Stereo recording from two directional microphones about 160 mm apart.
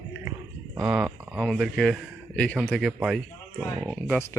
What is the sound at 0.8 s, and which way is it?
Speech, 5° right (ahead or behind).